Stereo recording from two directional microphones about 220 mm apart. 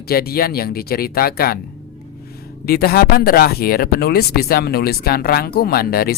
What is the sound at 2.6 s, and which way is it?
Speech, 45° left (ahead or behind).